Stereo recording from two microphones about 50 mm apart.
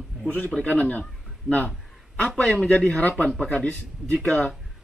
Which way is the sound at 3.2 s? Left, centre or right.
Centre.